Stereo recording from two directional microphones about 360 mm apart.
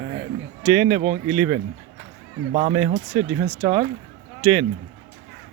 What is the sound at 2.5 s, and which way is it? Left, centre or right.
Speech, centre.